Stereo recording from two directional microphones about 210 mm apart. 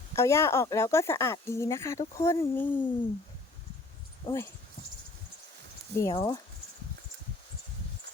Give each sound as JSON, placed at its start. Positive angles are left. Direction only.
{"t": 0.2, "sound": "speech", "side_deg": 15}
{"t": 4.3, "sound": "speech", "side_deg": 25}
{"t": 6.0, "sound": "speech", "side_deg": 15}